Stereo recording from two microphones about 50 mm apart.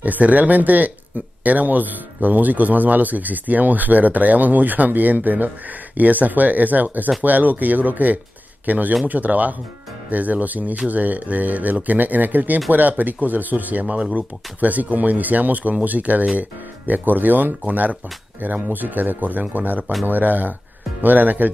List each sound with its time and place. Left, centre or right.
0.0 s speech: right
19.8 s speech: centre
20.1 s speech: right